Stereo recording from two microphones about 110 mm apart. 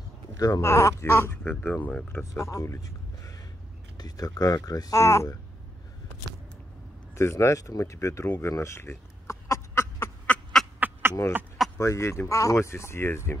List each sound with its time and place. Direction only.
0.4 s speech: 30° left (ahead or behind)
4.0 s speech: 35° left (ahead or behind)
7.2 s speech: 25° left (ahead or behind)
10.2 s duck: 10° left (ahead or behind)
10.8 s a sound: 20° right (ahead or behind)
11.8 s speech: 25° left (ahead or behind)